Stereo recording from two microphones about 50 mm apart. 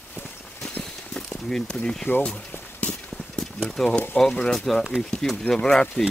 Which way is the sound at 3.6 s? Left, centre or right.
Centre.